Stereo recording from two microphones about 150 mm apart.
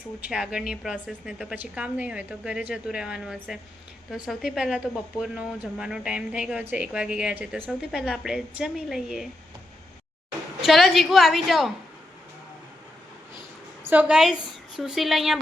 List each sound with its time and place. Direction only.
0.2 s speech: 5° right (ahead or behind)
10.6 s speech: centre (ahead or behind)
13.8 s a woman's voice: 10° right (ahead or behind)